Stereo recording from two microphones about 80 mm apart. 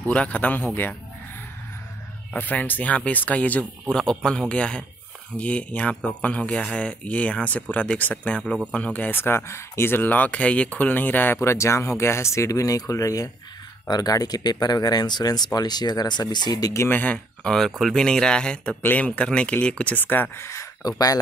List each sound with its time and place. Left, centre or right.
0.1 s speech: centre
2.3 s speech: left
11.4 s speech: left
16.9 s speech: centre; by 20.6 s left
20.8 s speech: left